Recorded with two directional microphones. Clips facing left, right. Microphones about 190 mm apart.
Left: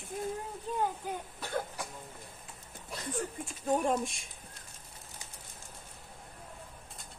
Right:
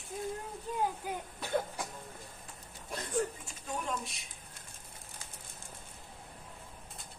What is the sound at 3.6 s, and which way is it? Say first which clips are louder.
Speech: left 9 dB; 50° left (ahead or behind).